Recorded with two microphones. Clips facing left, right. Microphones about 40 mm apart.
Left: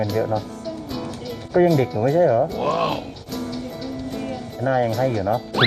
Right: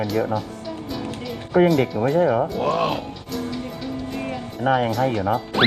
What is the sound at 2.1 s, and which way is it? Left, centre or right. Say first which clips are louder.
Speech: left 3 dB; right.